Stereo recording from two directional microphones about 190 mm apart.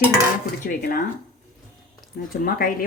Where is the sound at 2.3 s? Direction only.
50° left (ahead or behind).